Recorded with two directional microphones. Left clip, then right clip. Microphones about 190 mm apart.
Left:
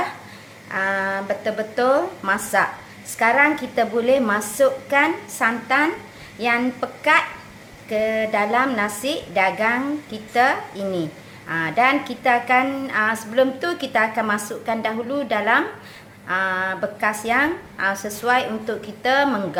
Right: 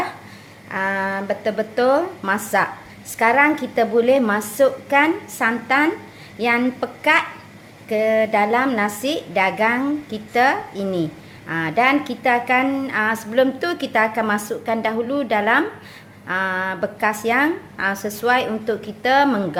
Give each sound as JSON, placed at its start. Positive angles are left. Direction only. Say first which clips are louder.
{"t": 0.7, "sound": "a woman's voice", "louder": "even", "side_deg": -25}